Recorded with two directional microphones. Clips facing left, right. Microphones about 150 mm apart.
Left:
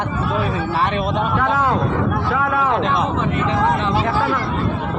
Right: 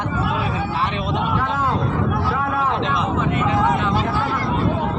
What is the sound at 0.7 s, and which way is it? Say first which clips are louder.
Speech: left 4 dB; 50° left (ahead or behind).